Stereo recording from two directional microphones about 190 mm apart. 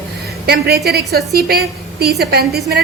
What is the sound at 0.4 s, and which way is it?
A woman's voice, 55° right (ahead or behind).